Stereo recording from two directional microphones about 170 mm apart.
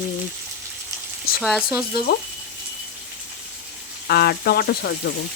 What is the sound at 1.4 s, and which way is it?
Speech, centre (ahead or behind).